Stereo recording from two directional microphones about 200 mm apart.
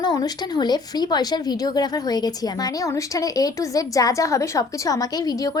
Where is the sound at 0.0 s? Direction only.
20° left (ahead or behind).